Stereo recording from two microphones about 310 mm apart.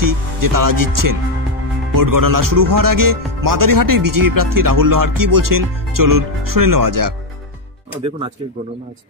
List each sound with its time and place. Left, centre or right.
0.0 s speech: right